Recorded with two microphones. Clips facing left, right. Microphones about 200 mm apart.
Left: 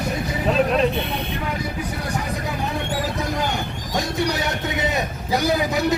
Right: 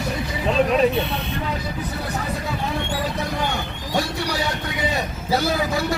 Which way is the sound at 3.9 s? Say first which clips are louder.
Left 1 dB; 20° left (ahead or behind).